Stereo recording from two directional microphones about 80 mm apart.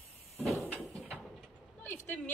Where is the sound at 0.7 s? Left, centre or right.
Centre.